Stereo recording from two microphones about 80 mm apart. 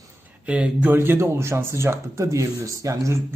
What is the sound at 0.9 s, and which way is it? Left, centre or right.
Speech, right.